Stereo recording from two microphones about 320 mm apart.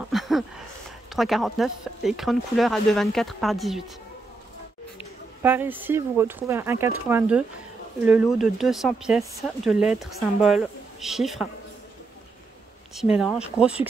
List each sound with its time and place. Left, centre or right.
0.1 s a sound: centre
1.1 s speech: centre
5.4 s speech: centre
12.9 s speech: centre